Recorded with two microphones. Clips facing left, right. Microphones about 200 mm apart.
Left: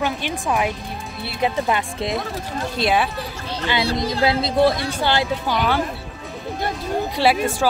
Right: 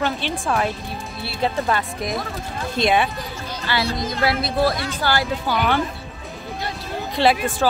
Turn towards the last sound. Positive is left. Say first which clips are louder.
# even
turn(degrees=10)  # may be behind; listen again after turning